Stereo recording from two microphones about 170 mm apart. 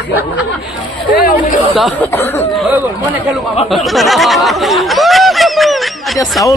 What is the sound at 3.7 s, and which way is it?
Snicker, centre (ahead or behind).